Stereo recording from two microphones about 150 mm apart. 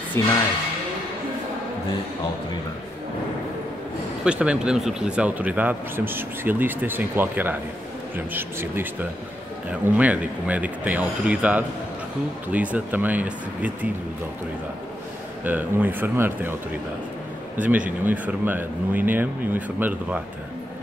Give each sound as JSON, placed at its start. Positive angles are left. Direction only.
{"t": 0.2, "sound": "speech", "side_deg": 15}
{"t": 4.2, "sound": "speech", "side_deg": -5}
{"t": 15.4, "sound": "speech", "side_deg": -10}